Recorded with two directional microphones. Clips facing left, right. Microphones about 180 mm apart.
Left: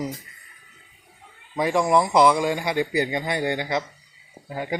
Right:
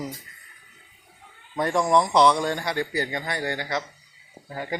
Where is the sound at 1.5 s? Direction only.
5° left (ahead or behind).